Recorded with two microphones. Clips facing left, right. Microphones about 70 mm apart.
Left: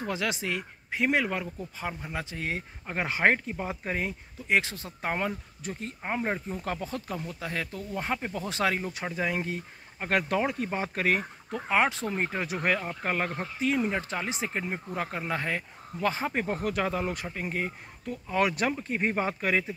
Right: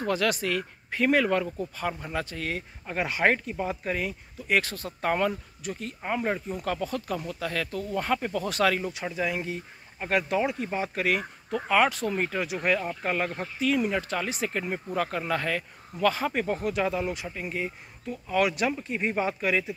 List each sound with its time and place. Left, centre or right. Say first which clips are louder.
0.0 s speech: right 5 dB; centre
5.6 s speech: right 2 dB; left
8.9 s speech: right 1 dB; left
16.5 s speech: right 2 dB; left